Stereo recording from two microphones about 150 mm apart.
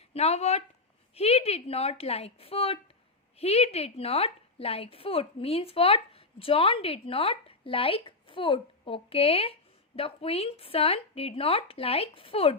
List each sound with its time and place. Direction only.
0.1 s a woman's voice: 45° left (ahead or behind)